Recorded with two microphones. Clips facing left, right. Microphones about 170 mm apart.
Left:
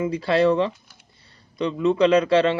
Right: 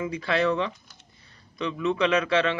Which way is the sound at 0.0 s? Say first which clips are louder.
Left 6 dB; 35° left (ahead or behind).